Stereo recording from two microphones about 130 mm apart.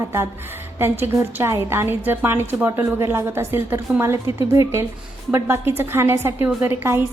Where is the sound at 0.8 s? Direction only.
15° right (ahead or behind).